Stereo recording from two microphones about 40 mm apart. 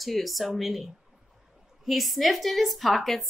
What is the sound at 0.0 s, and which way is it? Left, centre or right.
A woman's voice, centre.